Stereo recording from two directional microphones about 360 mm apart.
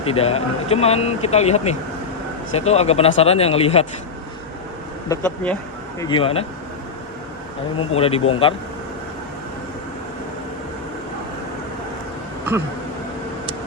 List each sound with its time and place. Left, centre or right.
0.0 s speech: centre
5.0 s speech: centre
7.8 s speech: centre